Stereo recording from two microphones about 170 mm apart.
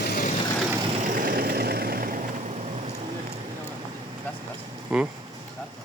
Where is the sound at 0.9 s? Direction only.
50° right (ahead or behind).